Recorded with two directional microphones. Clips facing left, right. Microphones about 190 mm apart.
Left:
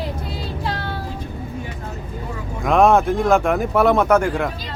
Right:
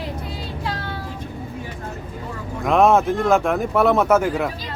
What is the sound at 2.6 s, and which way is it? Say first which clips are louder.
Speech: left 1 dB; centre (ahead or behind).